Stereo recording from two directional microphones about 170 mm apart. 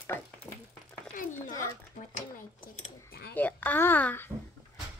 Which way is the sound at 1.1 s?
50° left (ahead or behind).